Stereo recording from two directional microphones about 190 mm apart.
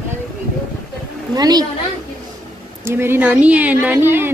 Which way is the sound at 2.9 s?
10° right (ahead or behind).